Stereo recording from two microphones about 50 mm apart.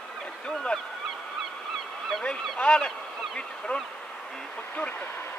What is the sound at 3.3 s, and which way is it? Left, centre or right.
Speech, left.